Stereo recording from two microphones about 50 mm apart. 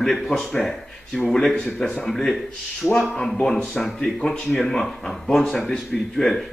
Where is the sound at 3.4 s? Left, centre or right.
Centre.